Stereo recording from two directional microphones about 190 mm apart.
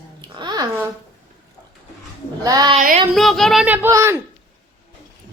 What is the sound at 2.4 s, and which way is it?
Speech, 20° right (ahead or behind).